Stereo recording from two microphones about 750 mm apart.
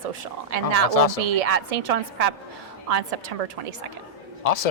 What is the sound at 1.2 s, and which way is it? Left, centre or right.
A woman's voice, right.